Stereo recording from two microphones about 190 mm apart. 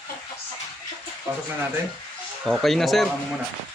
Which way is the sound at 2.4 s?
Centre (ahead or behind).